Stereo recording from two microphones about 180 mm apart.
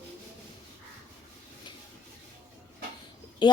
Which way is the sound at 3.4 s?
25° left (ahead or behind).